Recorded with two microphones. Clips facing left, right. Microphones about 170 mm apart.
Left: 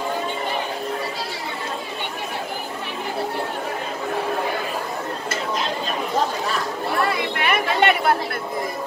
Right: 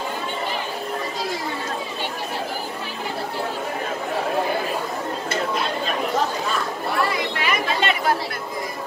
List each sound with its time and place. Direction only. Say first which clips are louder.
7.4 s chatter: left 5 dB; 60° left (ahead or behind)